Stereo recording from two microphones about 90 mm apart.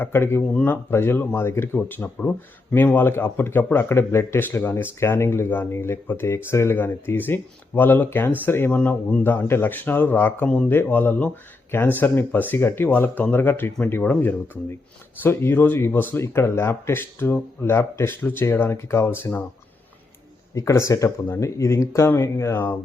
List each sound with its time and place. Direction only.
0.0 s speech: 25° left (ahead or behind)
20.6 s speech: 35° left (ahead or behind)